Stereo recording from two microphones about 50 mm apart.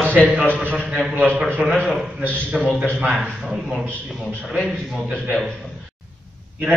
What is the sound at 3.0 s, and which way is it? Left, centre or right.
A man's voice, centre.